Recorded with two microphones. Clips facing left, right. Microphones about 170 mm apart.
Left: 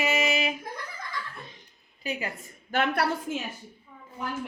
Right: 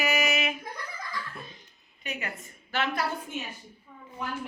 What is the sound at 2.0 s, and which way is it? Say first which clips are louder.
Speech: left 5 dB; 30° left (ahead or behind).